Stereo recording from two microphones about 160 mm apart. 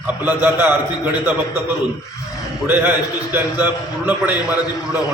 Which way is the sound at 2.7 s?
10° right (ahead or behind).